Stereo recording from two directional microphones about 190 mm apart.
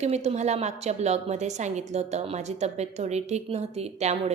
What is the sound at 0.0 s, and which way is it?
A woman's voice, 35° right (ahead or behind).